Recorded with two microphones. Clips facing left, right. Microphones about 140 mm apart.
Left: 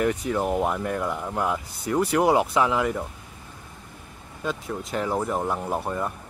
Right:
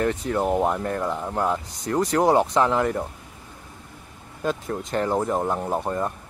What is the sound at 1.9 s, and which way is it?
Speech, 10° left (ahead or behind).